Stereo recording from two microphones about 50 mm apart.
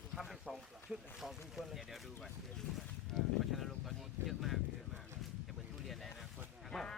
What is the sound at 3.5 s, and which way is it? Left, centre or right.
Speech, centre.